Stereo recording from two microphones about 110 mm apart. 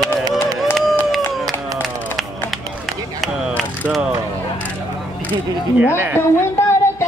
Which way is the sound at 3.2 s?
Centre (ahead or behind).